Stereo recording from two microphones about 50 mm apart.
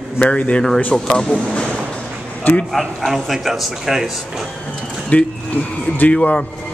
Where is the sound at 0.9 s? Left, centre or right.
Centre.